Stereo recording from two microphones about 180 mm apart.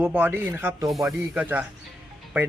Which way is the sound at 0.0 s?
10° right (ahead or behind).